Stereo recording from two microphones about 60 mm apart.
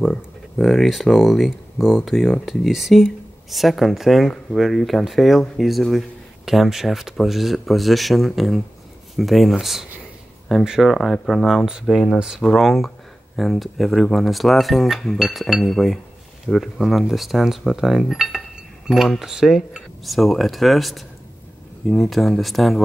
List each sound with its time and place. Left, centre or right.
0.1 s speech: centre
11.8 s speech: centre
15.6 s speech: centre